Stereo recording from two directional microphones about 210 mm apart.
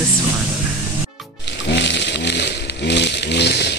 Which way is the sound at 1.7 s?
55° left (ahead or behind).